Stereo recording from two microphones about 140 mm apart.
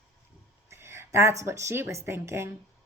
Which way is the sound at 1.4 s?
20° right (ahead or behind).